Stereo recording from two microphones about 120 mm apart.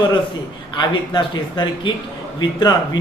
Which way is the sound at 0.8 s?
40° left (ahead or behind).